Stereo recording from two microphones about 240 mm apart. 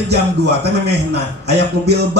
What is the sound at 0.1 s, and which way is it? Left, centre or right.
Speech, right.